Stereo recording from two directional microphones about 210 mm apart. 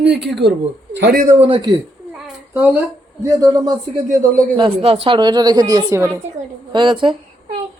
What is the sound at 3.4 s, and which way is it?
Speech, 15° right (ahead or behind).